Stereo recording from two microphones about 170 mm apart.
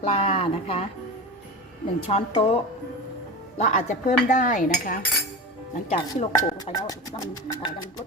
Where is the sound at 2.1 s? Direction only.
35° left (ahead or behind).